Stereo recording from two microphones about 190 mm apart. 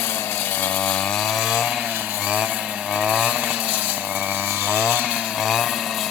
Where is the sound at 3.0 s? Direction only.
5° right (ahead or behind).